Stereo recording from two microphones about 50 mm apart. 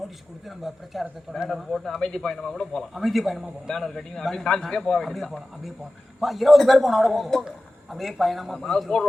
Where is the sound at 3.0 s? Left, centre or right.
Centre.